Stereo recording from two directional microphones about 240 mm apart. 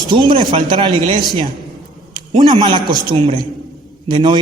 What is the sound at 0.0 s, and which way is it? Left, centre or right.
A man's voice, centre.